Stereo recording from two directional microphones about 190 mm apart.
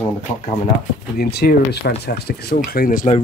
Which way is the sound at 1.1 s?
55° left (ahead or behind).